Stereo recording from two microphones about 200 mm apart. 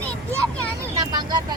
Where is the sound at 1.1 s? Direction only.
20° right (ahead or behind).